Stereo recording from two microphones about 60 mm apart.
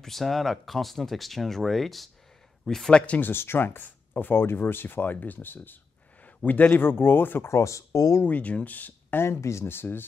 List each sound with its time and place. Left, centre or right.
0.0 s speech: centre
2.9 s speech: centre
3.2 s speech: left
7.5 s speech: left
8.2 s speech: left
9.2 s speech: left